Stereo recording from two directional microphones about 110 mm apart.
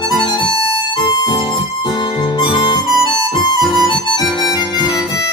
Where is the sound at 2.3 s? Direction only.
45° left (ahead or behind).